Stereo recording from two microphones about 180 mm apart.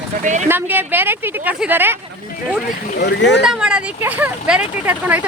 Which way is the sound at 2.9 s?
70° left (ahead or behind).